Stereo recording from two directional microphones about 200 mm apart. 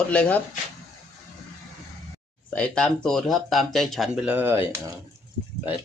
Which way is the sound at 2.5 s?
5° left (ahead or behind).